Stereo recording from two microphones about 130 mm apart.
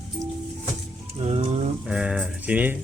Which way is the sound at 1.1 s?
50° right (ahead or behind).